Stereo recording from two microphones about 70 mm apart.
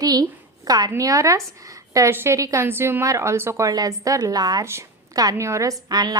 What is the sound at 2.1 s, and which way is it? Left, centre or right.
Speech, right.